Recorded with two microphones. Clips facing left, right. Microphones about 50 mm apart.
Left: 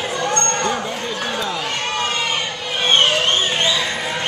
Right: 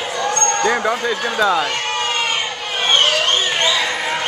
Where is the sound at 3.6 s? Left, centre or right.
Right.